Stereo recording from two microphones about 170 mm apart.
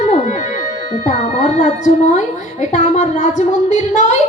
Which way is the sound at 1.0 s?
45° left (ahead or behind).